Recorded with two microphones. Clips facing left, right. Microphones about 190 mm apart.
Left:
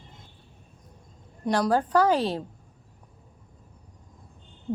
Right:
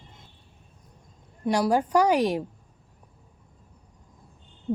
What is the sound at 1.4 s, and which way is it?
Speech, 10° right (ahead or behind).